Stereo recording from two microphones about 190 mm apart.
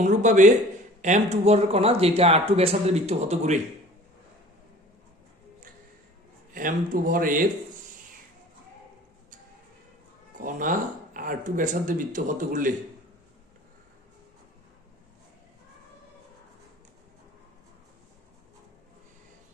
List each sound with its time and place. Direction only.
0.0 s speech: 40° right (ahead or behind)
6.5 s speech: 45° right (ahead or behind)
10.3 s speech: 45° right (ahead or behind)